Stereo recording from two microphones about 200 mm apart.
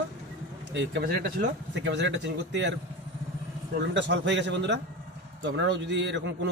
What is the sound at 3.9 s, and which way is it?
A man's voice, 60° right (ahead or behind).